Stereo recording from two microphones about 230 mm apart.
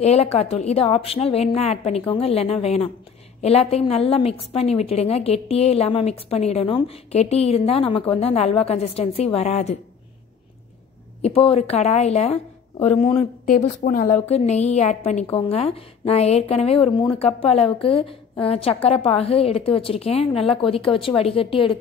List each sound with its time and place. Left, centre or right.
0.0 s a woman's voice: left
11.2 s a woman's voice: left
13.5 s a woman's voice: left